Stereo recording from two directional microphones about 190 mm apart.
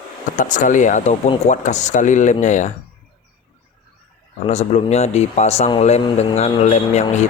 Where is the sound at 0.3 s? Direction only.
40° left (ahead or behind).